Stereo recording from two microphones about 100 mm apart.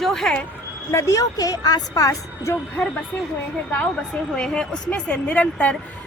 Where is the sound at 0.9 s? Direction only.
30° left (ahead or behind).